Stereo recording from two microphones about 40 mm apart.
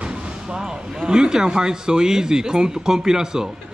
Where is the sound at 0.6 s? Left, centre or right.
Right.